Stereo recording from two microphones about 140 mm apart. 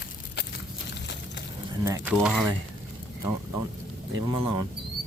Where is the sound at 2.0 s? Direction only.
5° right (ahead or behind).